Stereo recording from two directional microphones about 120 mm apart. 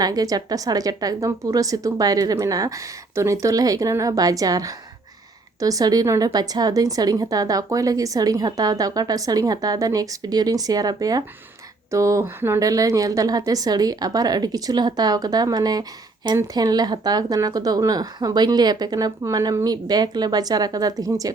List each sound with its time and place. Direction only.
0.0 s a woman's voice: 30° right (ahead or behind)